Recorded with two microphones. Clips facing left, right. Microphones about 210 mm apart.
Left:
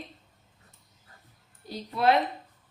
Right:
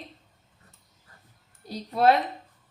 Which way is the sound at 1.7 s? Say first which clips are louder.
Right 4 dB; 40° right (ahead or behind).